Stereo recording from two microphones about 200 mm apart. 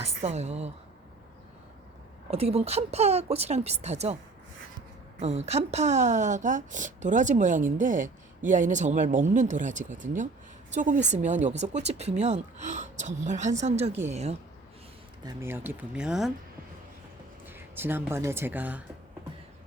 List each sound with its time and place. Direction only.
0.0 s a woman's voice: 35° right (ahead or behind)
2.3 s a woman's voice: 30° right (ahead or behind)
5.5 s a woman's voice: 35° right (ahead or behind)
15.2 s speech: 15° right (ahead or behind)
17.4 s speech: 10° right (ahead or behind)